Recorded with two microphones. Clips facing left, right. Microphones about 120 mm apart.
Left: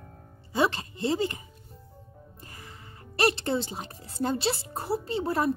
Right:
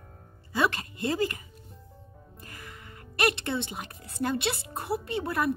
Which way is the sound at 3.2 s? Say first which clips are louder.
Left 2 dB; 35° left (ahead or behind).